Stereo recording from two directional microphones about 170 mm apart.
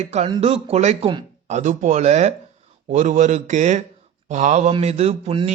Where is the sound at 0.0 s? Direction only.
40° right (ahead or behind).